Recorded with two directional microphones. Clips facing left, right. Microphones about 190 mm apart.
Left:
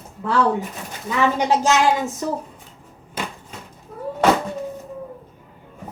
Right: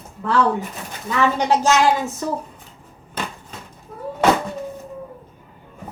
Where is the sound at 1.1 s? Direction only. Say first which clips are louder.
Even; 15° left (ahead or behind).